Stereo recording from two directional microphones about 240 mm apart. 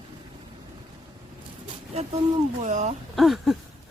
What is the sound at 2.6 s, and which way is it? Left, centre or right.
Speech, right.